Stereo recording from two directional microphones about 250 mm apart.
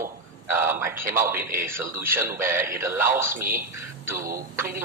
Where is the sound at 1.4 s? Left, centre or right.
Right.